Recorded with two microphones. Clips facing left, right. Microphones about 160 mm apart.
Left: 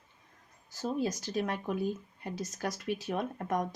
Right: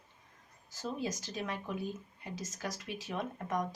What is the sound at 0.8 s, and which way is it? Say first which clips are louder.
Speech: left 5 dB; 45° left (ahead or behind).